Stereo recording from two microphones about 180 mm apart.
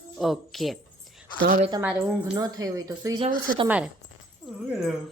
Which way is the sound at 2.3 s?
20° right (ahead or behind).